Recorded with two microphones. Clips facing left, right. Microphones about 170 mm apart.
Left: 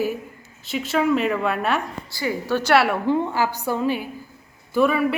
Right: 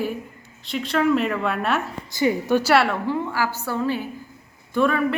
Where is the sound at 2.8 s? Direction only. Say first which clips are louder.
Left 3 dB; 15° left (ahead or behind).